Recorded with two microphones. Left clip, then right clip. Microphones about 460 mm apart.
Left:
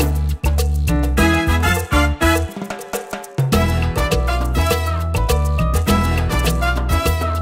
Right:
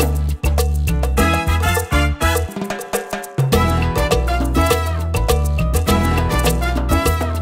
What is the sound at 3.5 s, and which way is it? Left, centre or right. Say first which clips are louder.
Music: right 2 dB; right.